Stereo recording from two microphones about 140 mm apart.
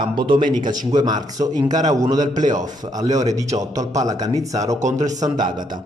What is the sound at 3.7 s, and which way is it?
A man's voice, 25° right (ahead or behind).